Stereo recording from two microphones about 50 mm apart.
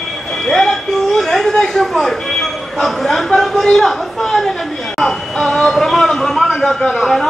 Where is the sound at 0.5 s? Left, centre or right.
Centre.